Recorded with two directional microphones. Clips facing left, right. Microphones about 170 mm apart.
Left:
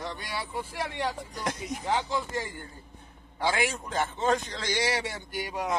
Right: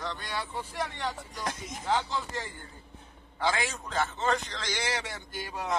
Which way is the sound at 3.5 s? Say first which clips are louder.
Left 3 dB; 15° left (ahead or behind).